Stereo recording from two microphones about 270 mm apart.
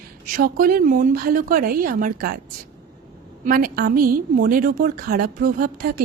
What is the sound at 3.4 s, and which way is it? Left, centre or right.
A woman's voice, right.